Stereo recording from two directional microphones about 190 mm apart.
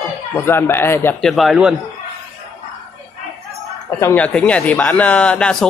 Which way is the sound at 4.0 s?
10° left (ahead or behind).